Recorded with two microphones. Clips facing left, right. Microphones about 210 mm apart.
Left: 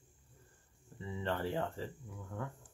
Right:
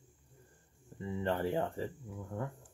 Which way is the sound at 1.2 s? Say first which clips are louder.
Right 3 dB; 20° right (ahead or behind).